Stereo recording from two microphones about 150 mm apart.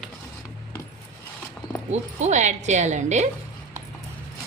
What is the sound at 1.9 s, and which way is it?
Speech, 50° right (ahead or behind).